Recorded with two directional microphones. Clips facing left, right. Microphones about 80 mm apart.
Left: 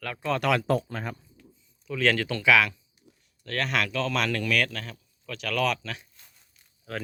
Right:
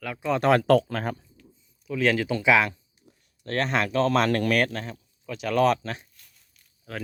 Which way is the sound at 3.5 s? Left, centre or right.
Right.